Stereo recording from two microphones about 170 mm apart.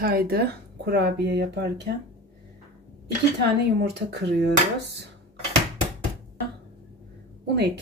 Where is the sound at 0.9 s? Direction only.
75° right (ahead or behind).